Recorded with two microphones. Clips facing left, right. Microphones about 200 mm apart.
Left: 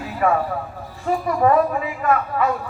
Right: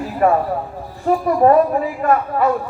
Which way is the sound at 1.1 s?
40° right (ahead or behind).